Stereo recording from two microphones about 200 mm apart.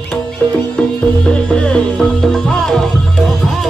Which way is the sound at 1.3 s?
5° left (ahead or behind).